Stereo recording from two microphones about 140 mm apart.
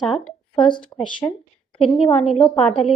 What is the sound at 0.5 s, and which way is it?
A woman's voice, 35° left (ahead or behind).